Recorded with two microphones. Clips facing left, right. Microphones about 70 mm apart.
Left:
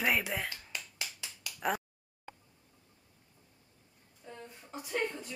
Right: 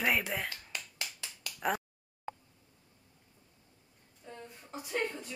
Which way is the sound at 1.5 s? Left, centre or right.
Centre.